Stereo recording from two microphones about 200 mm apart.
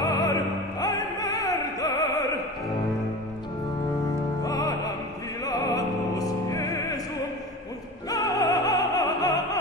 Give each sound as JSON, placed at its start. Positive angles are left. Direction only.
{"t": 0.0, "sound": "music", "side_deg": 15}
{"t": 4.4, "sound": "music", "side_deg": 15}
{"t": 5.4, "sound": "opera", "side_deg": 20}
{"t": 8.1, "sound": "music", "side_deg": 15}